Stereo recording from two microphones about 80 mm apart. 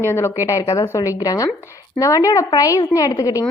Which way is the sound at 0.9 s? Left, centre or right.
Left.